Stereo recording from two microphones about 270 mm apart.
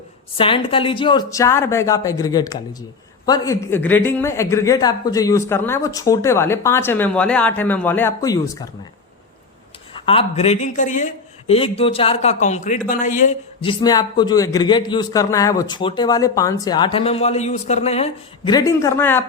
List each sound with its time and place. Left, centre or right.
0.3 s a man's voice: centre
10.1 s a man's voice: left